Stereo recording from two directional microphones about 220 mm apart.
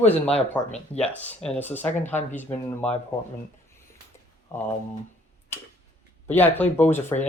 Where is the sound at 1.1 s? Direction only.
5° left (ahead or behind).